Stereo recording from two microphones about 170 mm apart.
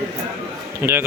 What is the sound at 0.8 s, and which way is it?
Speech, 15° right (ahead or behind).